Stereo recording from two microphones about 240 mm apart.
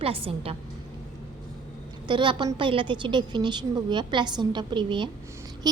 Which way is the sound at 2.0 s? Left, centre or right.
Centre.